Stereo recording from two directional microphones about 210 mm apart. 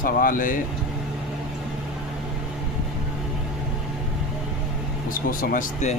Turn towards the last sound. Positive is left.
turn(degrees=35)  # may be behind; listen again after turning